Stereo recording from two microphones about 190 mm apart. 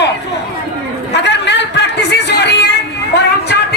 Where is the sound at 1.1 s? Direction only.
65° left (ahead or behind).